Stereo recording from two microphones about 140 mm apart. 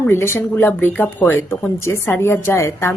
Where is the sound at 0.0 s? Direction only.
15° left (ahead or behind).